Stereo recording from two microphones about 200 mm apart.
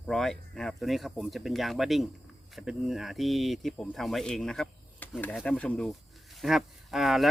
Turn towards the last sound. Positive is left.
turn(degrees=0)  # may be behind; listen again after turning